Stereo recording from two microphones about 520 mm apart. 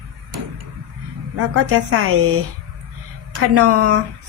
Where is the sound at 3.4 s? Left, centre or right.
Right.